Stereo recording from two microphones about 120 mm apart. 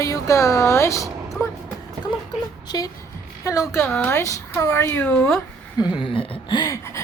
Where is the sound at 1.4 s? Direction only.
25° left (ahead or behind).